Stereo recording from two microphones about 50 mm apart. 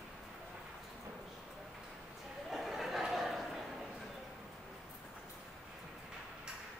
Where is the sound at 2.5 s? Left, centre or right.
Centre.